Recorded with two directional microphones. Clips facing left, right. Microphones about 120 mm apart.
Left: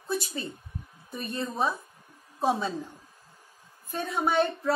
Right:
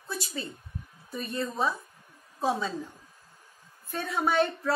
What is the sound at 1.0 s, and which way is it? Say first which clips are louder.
A woman's voice: right 1 dB; 25° left (ahead or behind).